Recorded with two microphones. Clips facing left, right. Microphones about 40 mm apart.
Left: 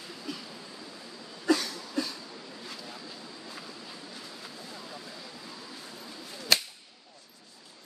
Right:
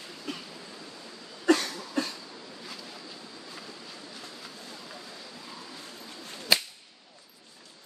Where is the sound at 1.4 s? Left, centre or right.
Right.